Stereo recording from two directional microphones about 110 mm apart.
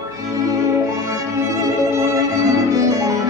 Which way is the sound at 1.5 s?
25° right (ahead or behind).